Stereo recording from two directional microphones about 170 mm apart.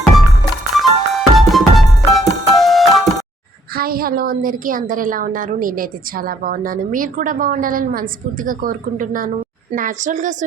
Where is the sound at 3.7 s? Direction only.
60° right (ahead or behind).